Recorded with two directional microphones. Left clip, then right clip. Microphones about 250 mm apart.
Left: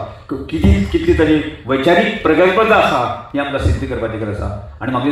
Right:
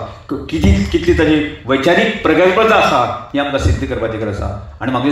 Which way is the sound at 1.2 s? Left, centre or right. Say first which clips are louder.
Right 1 dB; right.